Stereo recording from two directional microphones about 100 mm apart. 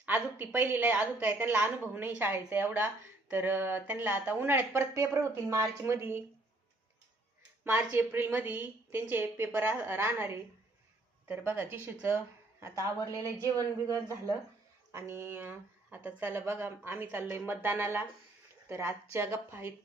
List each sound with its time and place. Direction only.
0.0 s a woman's voice: 15° right (ahead or behind)
7.9 s a woman's voice: 20° right (ahead or behind)
14.9 s a woman's voice: 25° right (ahead or behind)